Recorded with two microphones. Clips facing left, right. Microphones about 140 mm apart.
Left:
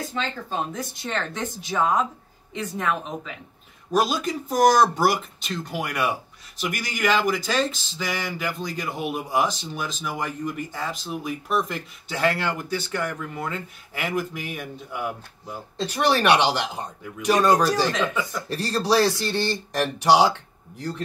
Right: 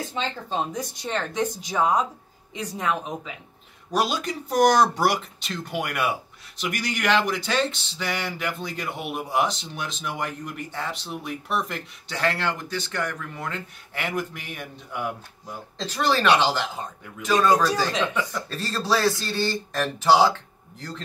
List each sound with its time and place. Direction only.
0.1 s speech: 15° right (ahead or behind)
3.9 s speech: centre (ahead or behind)
15.8 s speech: 15° left (ahead or behind)